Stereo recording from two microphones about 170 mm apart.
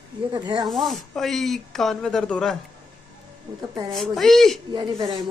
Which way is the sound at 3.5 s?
25° right (ahead or behind).